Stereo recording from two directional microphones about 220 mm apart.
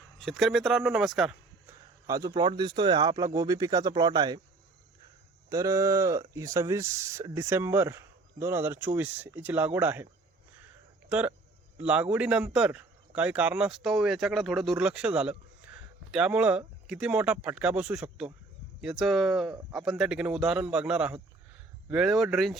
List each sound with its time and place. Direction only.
0.2 s a man's voice: centre (ahead or behind)
2.0 s speech: 15° right (ahead or behind)
5.5 s speech: 15° right (ahead or behind)
11.1 s a man's voice: 5° right (ahead or behind)